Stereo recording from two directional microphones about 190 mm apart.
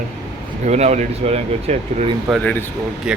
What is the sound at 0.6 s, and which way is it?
Speech, 35° right (ahead or behind).